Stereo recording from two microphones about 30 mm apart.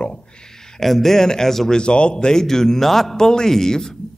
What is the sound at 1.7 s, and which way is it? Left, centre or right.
Speech, left.